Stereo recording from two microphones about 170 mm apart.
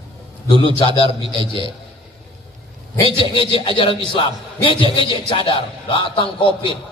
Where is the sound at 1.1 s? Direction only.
30° right (ahead or behind).